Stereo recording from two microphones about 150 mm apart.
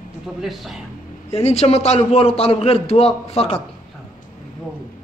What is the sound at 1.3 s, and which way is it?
A man's voice, 45° left (ahead or behind).